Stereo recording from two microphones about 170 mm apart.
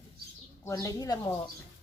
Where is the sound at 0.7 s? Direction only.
20° left (ahead or behind).